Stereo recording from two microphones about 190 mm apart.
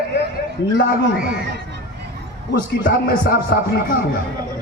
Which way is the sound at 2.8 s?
50° left (ahead or behind).